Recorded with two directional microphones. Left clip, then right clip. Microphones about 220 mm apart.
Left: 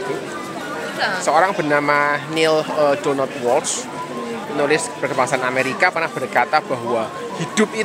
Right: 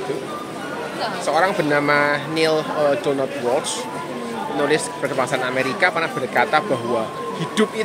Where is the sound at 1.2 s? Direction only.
20° left (ahead or behind).